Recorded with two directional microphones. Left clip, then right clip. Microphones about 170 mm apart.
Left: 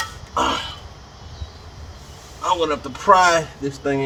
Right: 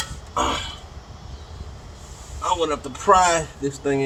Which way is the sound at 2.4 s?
15° right (ahead or behind).